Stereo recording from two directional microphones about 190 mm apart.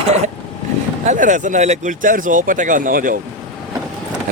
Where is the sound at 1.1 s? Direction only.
40° right (ahead or behind).